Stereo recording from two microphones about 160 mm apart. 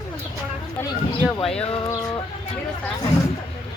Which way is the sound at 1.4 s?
5° left (ahead or behind).